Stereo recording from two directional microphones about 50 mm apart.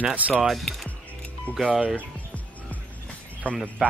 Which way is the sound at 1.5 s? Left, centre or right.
Left.